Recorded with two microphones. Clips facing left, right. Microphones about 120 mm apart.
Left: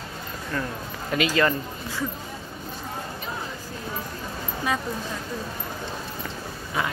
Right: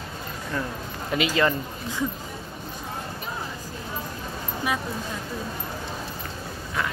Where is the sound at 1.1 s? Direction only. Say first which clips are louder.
Left 1 dB; 20° right (ahead or behind).